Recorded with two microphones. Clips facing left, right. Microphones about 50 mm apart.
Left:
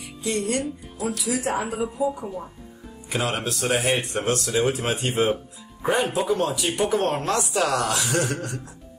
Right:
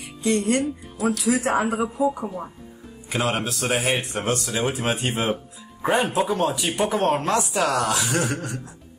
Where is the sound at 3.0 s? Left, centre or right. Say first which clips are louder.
Right 2 dB; centre.